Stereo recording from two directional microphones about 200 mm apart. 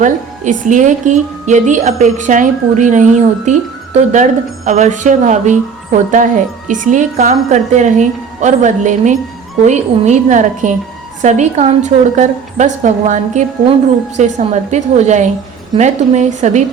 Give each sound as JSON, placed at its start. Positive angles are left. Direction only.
{"t": 0.0, "sound": "a woman's voice", "side_deg": -40}